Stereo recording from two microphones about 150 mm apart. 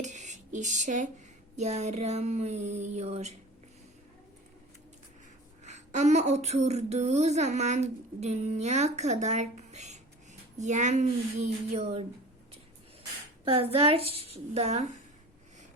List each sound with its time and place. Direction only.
0.0 s a sound: 50° right (ahead or behind)
1.5 s speech: 50° right (ahead or behind)
5.6 s speech: 50° right (ahead or behind)
13.5 s speech: 40° right (ahead or behind)